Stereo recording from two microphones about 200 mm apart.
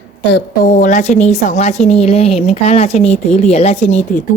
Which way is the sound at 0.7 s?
40° left (ahead or behind).